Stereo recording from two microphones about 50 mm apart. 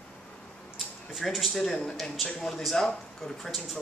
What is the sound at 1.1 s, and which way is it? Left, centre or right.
Speech, centre.